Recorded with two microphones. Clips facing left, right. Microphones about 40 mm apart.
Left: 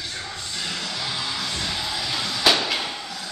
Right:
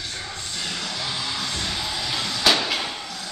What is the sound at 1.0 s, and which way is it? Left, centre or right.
Music, centre.